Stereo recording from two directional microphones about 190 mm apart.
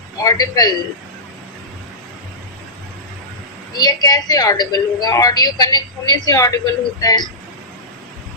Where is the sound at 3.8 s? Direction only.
20° left (ahead or behind).